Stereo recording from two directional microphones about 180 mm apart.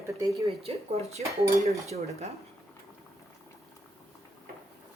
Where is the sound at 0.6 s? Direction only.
35° right (ahead or behind).